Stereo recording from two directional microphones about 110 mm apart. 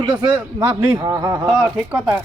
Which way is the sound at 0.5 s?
20° right (ahead or behind).